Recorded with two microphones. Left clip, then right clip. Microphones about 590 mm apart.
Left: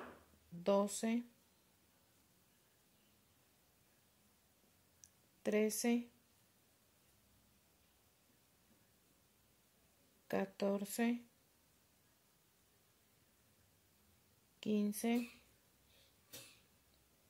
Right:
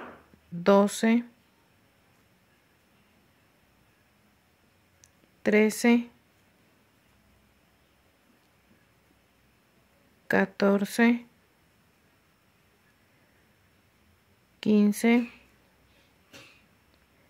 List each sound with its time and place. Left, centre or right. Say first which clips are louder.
0.7 s speech: right 14 dB; left
5.0 s a sound: right 13 dB; left
10.2 s speech: right 15 dB; left
14.6 s speech: right 15 dB; left